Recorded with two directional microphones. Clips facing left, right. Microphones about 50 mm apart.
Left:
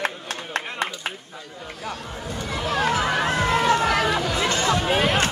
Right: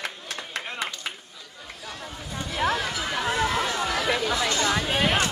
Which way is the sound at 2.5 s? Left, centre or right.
Left.